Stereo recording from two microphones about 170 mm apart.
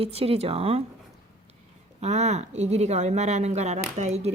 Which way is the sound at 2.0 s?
40° right (ahead or behind).